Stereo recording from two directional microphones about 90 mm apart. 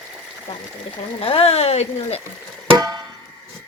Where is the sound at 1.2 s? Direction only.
90° left.